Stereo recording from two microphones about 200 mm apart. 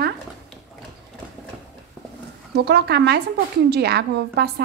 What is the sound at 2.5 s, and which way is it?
A woman's voice, 55° right (ahead or behind).